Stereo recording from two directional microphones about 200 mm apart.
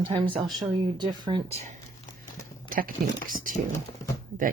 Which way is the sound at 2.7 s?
45° right (ahead or behind).